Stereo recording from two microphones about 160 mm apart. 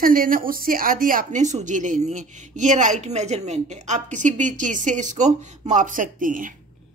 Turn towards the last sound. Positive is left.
turn(degrees=-55)  # may be behind; listen again after turning